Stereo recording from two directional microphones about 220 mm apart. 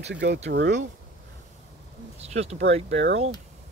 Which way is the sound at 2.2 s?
30° right (ahead or behind).